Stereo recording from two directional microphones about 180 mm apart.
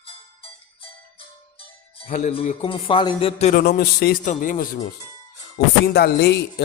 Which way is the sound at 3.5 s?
60° left (ahead or behind).